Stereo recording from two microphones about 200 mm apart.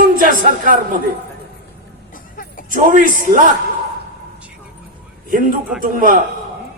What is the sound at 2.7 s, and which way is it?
Speech, 45° right (ahead or behind).